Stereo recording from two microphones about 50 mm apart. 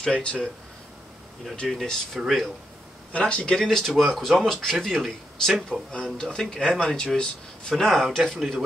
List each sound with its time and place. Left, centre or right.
0.1 s speech: left
1.7 s speech: centre
3.1 s speech: left
3.5 s speech: centre
5.7 s speech: centre
7.7 s speech: centre